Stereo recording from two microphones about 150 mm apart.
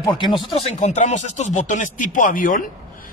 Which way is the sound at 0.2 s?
35° left (ahead or behind).